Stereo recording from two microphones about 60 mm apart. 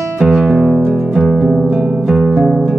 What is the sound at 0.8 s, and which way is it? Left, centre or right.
Music, centre.